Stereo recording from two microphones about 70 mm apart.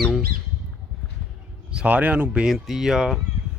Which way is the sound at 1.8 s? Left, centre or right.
Right.